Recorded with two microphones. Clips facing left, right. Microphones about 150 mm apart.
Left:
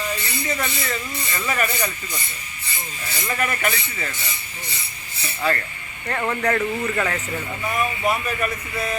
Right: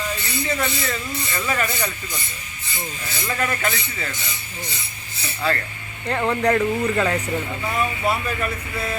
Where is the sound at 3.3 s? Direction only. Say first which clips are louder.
Even; 10° left (ahead or behind).